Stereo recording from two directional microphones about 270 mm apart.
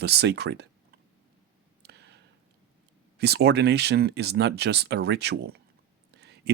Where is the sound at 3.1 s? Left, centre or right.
Right.